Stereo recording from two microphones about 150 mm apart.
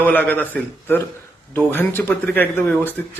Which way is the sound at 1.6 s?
15° left (ahead or behind).